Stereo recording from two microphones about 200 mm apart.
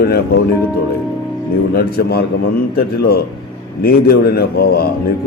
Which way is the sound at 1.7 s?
50° left (ahead or behind).